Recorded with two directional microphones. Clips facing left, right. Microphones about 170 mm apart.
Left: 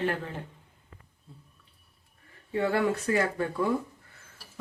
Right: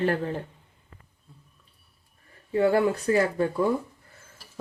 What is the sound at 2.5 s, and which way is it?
Speech, 30° right (ahead or behind).